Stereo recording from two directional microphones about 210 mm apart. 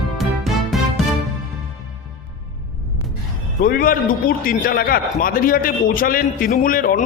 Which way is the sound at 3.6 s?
45° left (ahead or behind).